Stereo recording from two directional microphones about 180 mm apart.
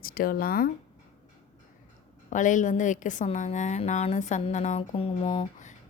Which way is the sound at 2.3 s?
45° left (ahead or behind).